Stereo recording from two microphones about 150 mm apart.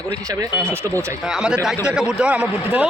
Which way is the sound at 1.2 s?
5° right (ahead or behind).